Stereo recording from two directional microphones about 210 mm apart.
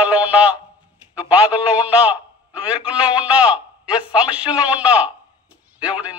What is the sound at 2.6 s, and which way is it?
A man's voice, 5° right (ahead or behind).